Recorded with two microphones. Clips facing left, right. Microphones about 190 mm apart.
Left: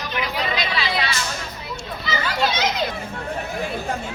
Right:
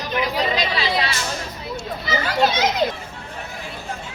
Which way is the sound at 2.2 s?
45° right (ahead or behind).